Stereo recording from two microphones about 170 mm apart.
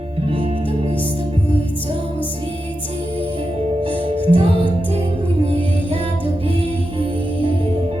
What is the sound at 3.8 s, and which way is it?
Music, 30° right (ahead or behind).